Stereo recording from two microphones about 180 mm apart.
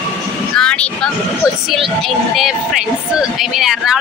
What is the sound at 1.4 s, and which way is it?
Speech, 20° left (ahead or behind).